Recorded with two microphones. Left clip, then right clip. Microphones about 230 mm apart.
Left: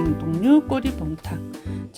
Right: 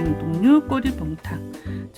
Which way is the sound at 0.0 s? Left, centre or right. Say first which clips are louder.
Right 1 dB; centre.